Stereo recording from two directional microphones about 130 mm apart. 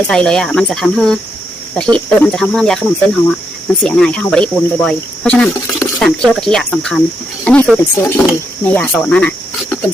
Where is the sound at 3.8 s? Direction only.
10° left (ahead or behind).